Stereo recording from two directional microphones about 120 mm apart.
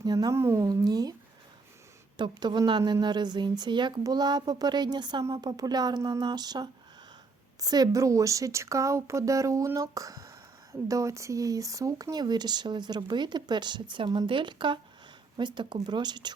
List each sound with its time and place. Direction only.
0.0 s a woman's voice: 35° right (ahead or behind)
2.1 s a woman's voice: 40° right (ahead or behind)